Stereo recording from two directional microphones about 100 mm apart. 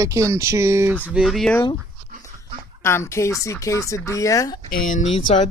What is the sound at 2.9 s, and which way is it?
Speech, 25° left (ahead or behind).